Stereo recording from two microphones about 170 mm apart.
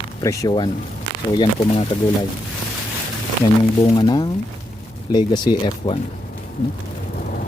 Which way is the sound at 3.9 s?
25° left (ahead or behind).